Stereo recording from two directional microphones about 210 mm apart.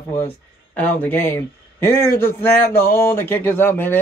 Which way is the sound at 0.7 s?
10° left (ahead or behind).